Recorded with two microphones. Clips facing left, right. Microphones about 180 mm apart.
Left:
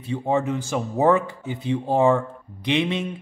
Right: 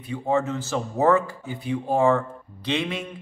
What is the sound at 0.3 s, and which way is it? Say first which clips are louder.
Speech: left 1 dB; 15° left (ahead or behind).